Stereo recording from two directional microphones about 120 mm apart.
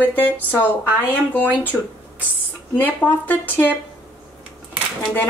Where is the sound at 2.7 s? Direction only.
15° left (ahead or behind).